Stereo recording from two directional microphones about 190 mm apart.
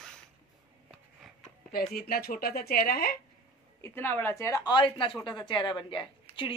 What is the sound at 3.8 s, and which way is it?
A woman's voice, 10° left (ahead or behind).